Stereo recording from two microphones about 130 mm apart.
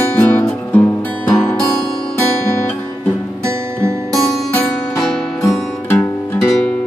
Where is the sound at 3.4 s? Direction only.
20° right (ahead or behind).